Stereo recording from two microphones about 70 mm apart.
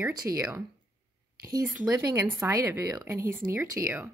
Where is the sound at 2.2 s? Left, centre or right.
Right.